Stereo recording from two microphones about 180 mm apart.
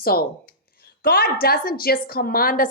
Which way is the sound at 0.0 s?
55° left (ahead or behind).